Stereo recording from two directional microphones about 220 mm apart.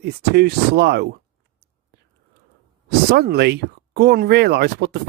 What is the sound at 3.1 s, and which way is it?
Speech, 45° right (ahead or behind).